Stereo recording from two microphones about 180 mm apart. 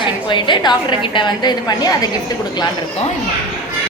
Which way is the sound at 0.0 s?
25° left (ahead or behind).